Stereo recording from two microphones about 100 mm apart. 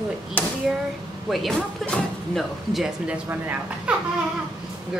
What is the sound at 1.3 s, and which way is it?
Speech, centre (ahead or behind).